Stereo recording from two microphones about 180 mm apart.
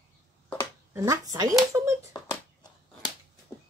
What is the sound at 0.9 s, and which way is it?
Speech, 15° right (ahead or behind).